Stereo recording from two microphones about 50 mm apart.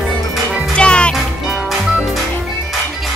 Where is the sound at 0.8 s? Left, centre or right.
Left.